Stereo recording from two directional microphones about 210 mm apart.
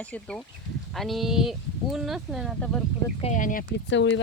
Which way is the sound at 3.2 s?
35° left (ahead or behind).